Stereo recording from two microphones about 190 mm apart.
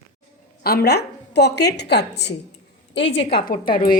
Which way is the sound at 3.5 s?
45° left (ahead or behind).